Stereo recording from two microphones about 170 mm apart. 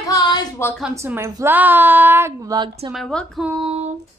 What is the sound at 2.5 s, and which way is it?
Speech, 25° right (ahead or behind).